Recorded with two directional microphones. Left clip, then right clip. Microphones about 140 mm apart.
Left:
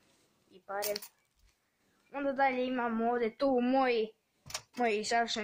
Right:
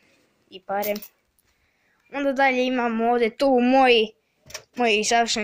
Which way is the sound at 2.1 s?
30° right (ahead or behind).